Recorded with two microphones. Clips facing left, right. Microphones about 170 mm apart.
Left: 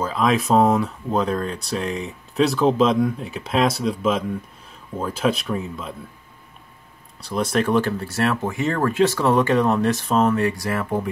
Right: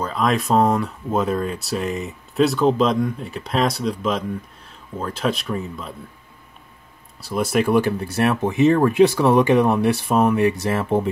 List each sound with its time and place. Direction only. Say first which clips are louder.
0.0 s speech: left 1 dB; centre (ahead or behind)
7.2 s speech: right 1 dB; 5° right (ahead or behind); by 11.1 s 25° right (ahead or behind)